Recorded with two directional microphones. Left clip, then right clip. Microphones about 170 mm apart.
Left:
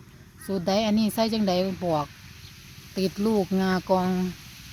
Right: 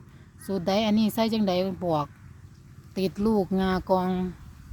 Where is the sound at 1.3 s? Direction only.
75° right (ahead or behind).